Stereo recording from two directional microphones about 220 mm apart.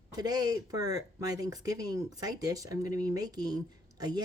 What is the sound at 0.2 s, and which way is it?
Speech, 15° right (ahead or behind).